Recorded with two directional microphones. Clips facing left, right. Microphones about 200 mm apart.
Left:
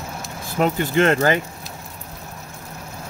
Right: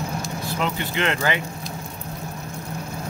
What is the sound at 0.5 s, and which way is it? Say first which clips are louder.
Speech: left 8 dB; 45° left (ahead or behind).